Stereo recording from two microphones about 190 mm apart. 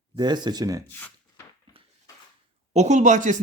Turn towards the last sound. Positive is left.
turn(degrees=-40)  # may be behind; listen again after turning